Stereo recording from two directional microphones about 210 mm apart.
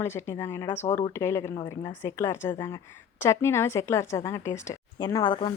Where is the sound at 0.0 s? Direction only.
10° left (ahead or behind).